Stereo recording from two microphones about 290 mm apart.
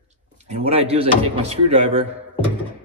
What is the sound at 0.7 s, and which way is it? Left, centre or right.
Speech, right.